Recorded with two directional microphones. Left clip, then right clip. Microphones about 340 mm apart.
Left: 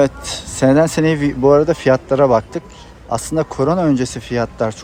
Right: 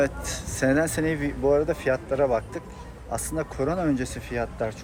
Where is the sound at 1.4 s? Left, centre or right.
Left.